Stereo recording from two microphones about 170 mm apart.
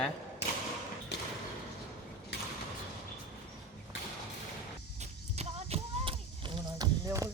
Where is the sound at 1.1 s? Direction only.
75° left (ahead or behind).